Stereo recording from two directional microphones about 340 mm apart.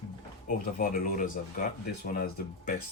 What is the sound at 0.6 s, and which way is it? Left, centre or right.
Speech, left.